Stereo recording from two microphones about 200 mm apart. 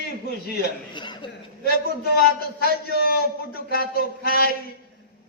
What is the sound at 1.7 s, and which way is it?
A man's voice, 50° left (ahead or behind).